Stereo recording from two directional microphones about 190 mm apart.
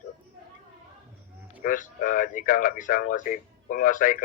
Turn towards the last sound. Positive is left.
turn(degrees=45)  # may be behind; listen again after turning